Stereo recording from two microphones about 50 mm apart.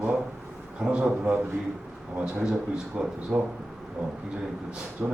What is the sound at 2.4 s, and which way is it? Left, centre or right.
A man's voice, centre.